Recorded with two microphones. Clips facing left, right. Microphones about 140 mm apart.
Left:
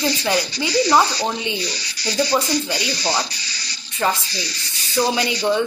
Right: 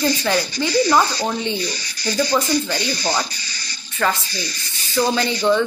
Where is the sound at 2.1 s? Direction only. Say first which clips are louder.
Even; 15° left (ahead or behind).